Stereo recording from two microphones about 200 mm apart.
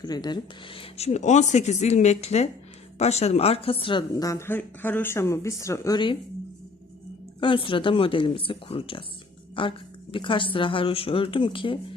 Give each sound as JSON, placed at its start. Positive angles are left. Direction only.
{"t": 0.0, "sound": "a woman's voice", "side_deg": 20}
{"t": 7.3, "sound": "speech", "side_deg": 25}